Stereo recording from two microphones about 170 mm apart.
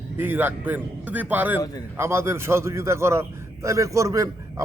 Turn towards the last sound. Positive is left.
turn(degrees=-20)  # may be behind; listen again after turning